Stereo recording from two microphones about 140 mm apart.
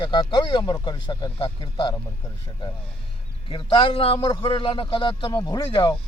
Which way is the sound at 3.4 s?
35° left (ahead or behind).